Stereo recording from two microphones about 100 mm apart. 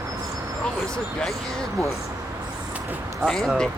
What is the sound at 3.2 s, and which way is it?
Speech, centre (ahead or behind).